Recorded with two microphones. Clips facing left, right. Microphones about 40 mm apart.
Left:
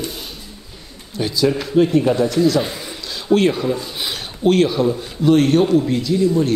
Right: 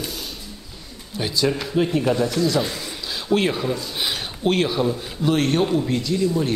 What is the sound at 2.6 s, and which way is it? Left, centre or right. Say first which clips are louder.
Speech: left 1 dB; centre.